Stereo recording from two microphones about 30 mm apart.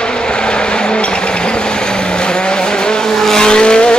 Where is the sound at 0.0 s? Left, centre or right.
Left.